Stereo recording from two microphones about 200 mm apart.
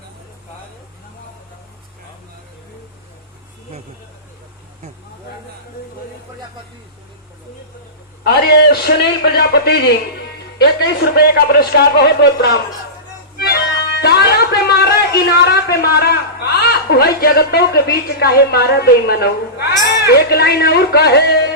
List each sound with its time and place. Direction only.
8.2 s speech: 55° left (ahead or behind)
13.3 s music: 50° left (ahead or behind)
14.0 s speech: 55° left (ahead or behind)